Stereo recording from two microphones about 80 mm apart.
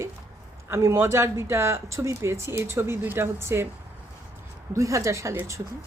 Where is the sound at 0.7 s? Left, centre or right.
Right.